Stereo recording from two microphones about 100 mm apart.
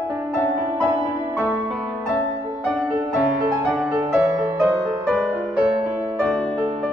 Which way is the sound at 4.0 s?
20° right (ahead or behind).